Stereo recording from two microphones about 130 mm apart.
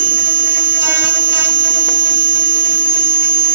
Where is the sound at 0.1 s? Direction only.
15° right (ahead or behind).